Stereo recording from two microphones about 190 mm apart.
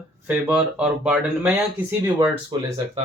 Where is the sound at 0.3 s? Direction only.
10° right (ahead or behind).